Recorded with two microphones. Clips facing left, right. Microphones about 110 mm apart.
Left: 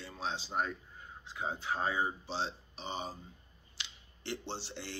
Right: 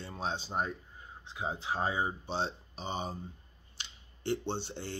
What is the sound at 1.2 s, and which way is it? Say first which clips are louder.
Speech: right 1 dB; 20° right (ahead or behind).